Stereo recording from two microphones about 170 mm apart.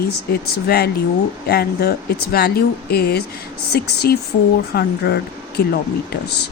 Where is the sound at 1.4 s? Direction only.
65° left (ahead or behind).